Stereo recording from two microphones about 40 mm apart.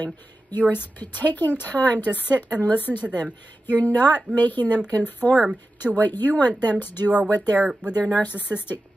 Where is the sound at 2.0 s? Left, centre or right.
Right.